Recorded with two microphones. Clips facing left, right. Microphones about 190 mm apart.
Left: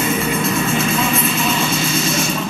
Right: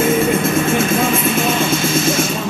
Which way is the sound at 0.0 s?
50° right (ahead or behind).